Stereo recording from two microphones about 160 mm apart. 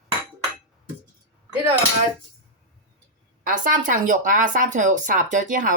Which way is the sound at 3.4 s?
55° right (ahead or behind).